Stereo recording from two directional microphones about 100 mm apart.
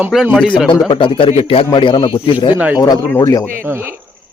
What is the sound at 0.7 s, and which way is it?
Speech, 55° left (ahead or behind).